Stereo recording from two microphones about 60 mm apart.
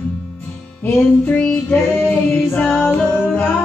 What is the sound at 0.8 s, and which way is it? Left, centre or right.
Music, left.